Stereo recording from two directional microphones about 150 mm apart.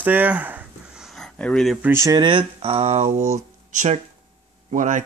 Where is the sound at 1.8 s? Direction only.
15° right (ahead or behind).